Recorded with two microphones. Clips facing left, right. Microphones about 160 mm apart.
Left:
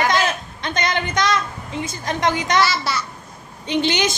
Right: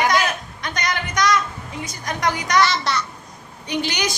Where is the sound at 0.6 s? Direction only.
25° left (ahead or behind).